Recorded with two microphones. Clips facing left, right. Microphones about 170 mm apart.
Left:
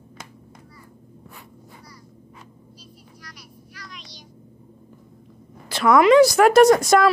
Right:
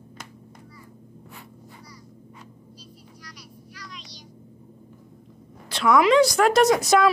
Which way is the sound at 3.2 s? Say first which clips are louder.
Right 1 dB; 50° left (ahead or behind).